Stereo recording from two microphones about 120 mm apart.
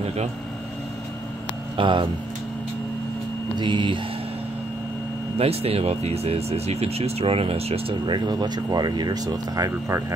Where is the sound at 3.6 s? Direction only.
40° right (ahead or behind).